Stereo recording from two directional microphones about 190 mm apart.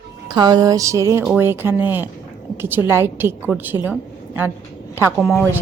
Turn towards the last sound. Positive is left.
turn(degrees=-5)  # may be behind; listen again after turning